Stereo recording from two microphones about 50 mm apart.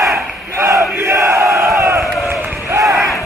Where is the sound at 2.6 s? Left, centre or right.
Right.